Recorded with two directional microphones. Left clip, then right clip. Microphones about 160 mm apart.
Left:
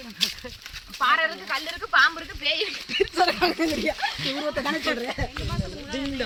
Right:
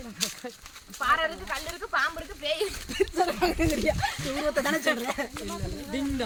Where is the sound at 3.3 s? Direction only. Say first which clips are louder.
Left 3 dB; 60° left (ahead or behind).